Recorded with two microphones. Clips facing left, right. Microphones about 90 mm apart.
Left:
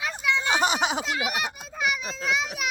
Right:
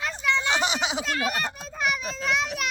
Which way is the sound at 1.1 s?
10° left (ahead or behind).